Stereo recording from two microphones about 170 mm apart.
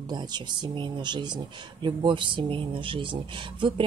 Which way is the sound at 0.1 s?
25° right (ahead or behind).